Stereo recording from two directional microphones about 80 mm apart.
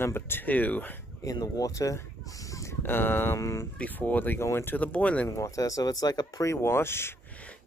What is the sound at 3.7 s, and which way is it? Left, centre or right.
Speech, centre.